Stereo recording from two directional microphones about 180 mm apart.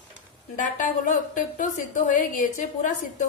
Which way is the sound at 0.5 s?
45° left (ahead or behind).